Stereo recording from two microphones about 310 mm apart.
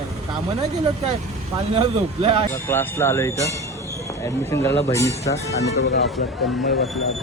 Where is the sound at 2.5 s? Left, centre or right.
Centre.